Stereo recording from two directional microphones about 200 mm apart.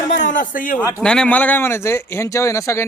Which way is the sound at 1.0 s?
5° left (ahead or behind).